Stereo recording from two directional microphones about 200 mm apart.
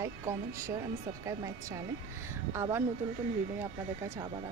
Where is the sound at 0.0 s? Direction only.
15° right (ahead or behind).